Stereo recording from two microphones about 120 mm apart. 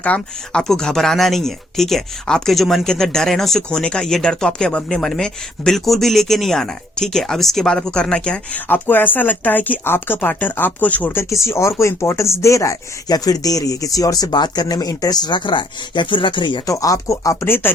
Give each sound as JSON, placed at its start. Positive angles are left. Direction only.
{"t": 0.0, "sound": "speech", "side_deg": 10}
{"t": 16.6, "sound": "speech", "side_deg": 30}